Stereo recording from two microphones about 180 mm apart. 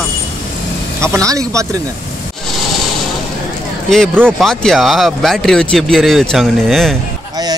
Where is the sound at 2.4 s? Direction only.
Centre (ahead or behind).